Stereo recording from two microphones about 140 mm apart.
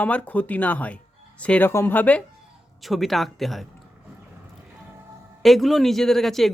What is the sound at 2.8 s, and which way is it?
Speech, centre (ahead or behind).